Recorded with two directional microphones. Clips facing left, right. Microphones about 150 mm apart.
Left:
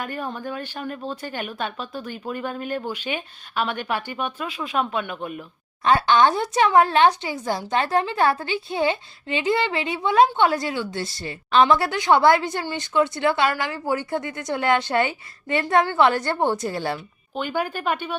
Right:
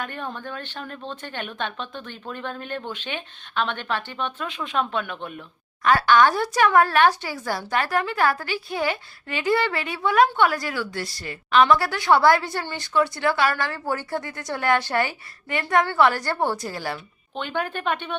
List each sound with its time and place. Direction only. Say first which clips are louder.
0.0 s speech: left 2 dB; 5° left (ahead or behind)
5.8 s a woman's voice: even; 25° left (ahead or behind)
17.3 s speech: left 2 dB; 5° left (ahead or behind)